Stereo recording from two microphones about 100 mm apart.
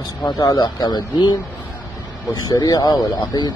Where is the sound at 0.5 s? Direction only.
45° left (ahead or behind).